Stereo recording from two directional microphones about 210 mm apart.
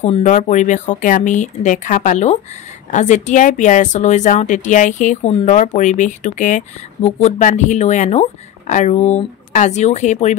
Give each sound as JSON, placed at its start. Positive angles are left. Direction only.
{"t": 0.0, "sound": "a woman's voice", "side_deg": 35}